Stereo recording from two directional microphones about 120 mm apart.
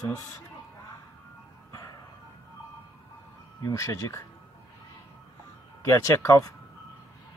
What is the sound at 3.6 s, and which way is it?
Speech, 25° left (ahead or behind).